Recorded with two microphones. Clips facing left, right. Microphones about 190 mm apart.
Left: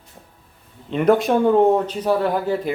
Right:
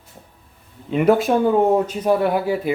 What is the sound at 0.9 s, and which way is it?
Speech, 5° right (ahead or behind).